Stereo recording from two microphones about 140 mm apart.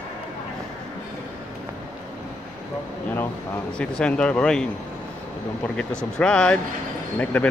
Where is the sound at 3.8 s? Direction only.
5° left (ahead or behind).